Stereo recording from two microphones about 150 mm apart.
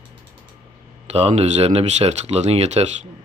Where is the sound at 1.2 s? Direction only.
45° right (ahead or behind).